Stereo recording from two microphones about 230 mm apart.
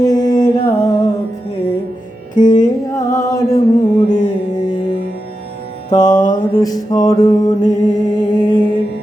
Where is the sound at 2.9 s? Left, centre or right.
Centre.